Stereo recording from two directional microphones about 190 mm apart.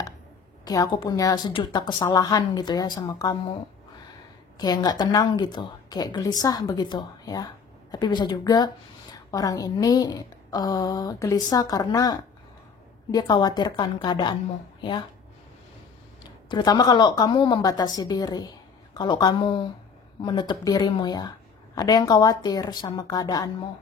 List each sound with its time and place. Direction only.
0.7 s a woman's voice: 20° left (ahead or behind)
4.6 s a woman's voice: 20° left (ahead or behind)
16.4 s a woman's voice: 20° left (ahead or behind)